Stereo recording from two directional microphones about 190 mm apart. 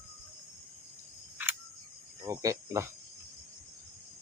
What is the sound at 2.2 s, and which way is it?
Speech, 15° right (ahead or behind).